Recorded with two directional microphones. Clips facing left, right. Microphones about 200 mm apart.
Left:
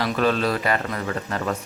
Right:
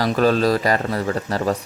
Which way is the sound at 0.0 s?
40° right (ahead or behind).